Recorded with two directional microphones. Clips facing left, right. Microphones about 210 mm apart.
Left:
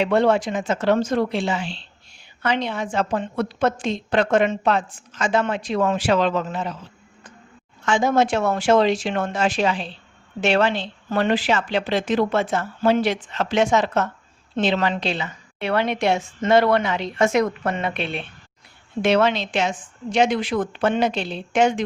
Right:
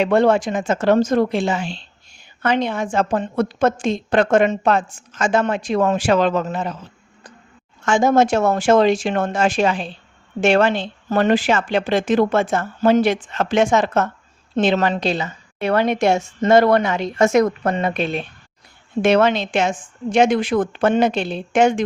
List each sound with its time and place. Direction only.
0.0 s a woman's voice: 45° right (ahead or behind)
7.9 s a woman's voice: 45° right (ahead or behind)